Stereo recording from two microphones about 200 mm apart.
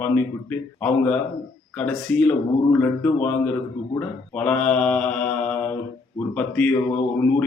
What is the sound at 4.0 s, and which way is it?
Mantra, 5° left (ahead or behind).